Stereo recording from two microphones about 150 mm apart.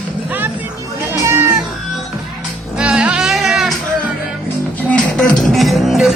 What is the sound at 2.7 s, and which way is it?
Music, 5° right (ahead or behind).